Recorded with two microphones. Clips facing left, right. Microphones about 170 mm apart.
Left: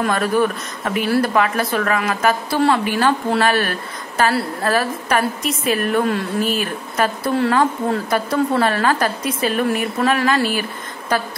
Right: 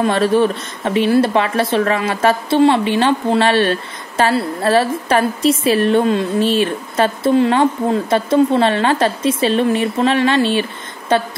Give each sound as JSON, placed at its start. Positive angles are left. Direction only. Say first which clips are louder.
{"t": 0.0, "sound": "a woman's voice", "louder": "right 4 dB", "side_deg": -25}